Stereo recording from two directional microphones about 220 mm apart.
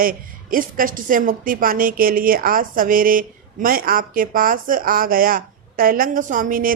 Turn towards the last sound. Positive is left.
turn(degrees=-40)  # may be behind; listen again after turning